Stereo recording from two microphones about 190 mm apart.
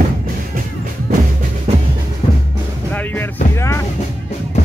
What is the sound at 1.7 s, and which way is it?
Music, 35° right (ahead or behind).